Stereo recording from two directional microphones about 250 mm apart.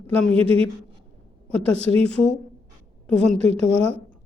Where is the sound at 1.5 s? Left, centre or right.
Centre.